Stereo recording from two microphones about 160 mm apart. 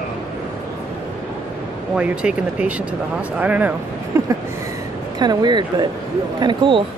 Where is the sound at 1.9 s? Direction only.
5° right (ahead or behind); by 6.8 s 30° right (ahead or behind).